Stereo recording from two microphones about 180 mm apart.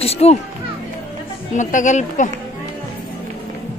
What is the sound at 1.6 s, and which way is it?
Speech, 45° left (ahead or behind).